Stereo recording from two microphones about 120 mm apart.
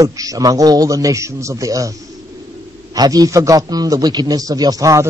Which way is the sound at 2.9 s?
30° right (ahead or behind).